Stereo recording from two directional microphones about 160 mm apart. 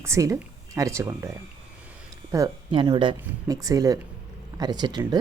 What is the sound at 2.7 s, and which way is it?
Speech, 30° right (ahead or behind).